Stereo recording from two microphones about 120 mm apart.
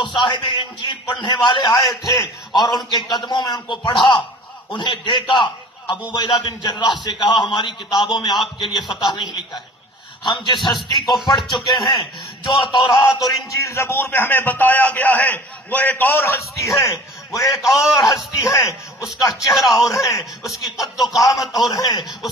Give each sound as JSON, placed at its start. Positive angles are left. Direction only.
{"t": 0.0, "sound": "a man's voice", "side_deg": 40}
{"t": 13.5, "sound": "a man's voice", "side_deg": 25}
{"t": 17.4, "sound": "a man's voice", "side_deg": 0}
{"t": 18.1, "sound": "speech", "side_deg": 30}
{"t": 19.5, "sound": "a man's voice", "side_deg": 0}
{"t": 21.5, "sound": "a man's voice", "side_deg": 35}